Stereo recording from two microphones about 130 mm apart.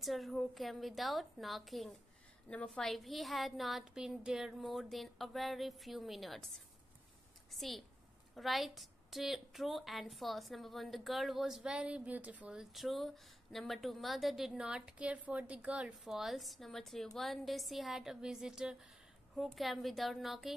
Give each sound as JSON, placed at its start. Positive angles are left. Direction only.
{"t": 0.0, "sound": "a woman's voice", "side_deg": 0}
{"t": 7.5, "sound": "a woman's voice", "side_deg": 0}